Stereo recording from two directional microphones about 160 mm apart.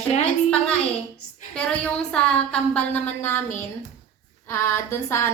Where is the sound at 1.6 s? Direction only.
5° left (ahead or behind).